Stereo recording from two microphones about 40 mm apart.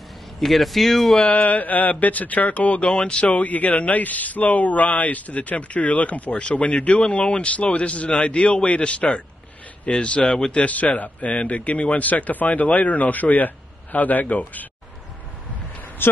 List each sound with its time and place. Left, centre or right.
0.4 s speech: centre
1.2 s speech: left
2.8 s speech: left
16.0 s speech: left